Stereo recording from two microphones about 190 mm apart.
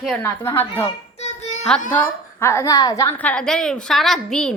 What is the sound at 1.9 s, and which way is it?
A woman's voice, 15° left (ahead or behind).